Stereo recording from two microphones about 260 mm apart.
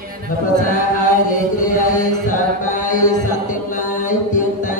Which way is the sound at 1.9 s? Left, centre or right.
Left.